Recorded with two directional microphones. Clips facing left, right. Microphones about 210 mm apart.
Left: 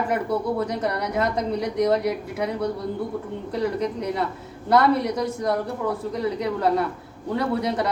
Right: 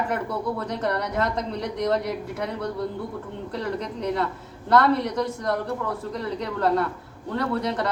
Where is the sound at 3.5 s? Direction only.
10° left (ahead or behind).